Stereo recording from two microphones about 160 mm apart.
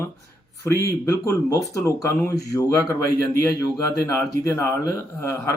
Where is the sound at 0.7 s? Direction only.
20° left (ahead or behind).